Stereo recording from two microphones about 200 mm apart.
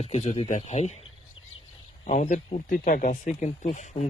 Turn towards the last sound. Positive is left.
turn(degrees=35)  # may be behind; listen again after turning